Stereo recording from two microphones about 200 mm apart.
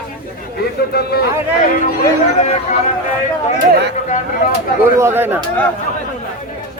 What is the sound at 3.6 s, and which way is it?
Speech, 60° right (ahead or behind).